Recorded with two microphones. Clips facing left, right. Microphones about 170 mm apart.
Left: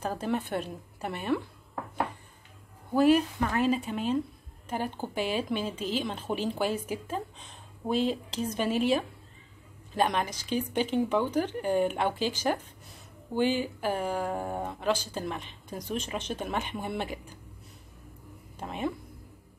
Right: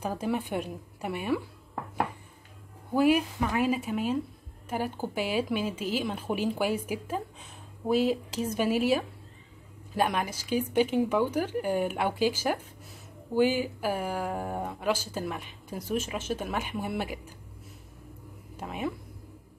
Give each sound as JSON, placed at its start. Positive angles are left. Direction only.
{"t": 0.0, "sound": "speech", "side_deg": -10}
{"t": 2.9, "sound": "speech", "side_deg": -10}
{"t": 18.6, "sound": "speech", "side_deg": -5}